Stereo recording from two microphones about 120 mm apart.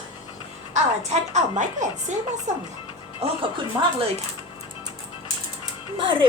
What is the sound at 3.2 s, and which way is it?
Speech, 55° right (ahead or behind).